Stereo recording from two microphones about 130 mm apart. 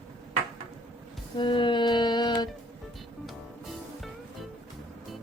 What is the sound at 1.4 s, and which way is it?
Music, 40° left (ahead or behind).